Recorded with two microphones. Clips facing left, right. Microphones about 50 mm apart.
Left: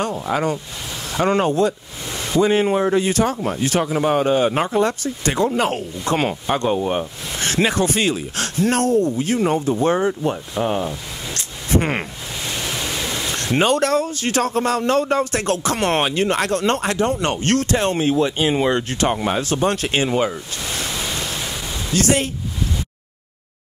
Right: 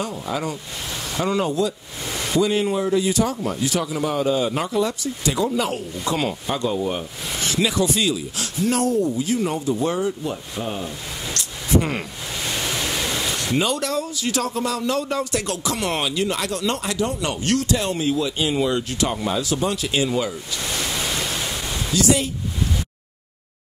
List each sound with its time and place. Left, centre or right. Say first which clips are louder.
0.0 s speech: left 5 dB; left
2.0 s a sound: left 2 dB; centre
2.4 s speech: left 6 dB; left
10.6 s speech: left 9 dB; left
12.4 s waves: even; centre
13.6 s speech: left 7 dB; left
20.8 s pink noise: even; centre
21.9 s speech: left 1 dB; left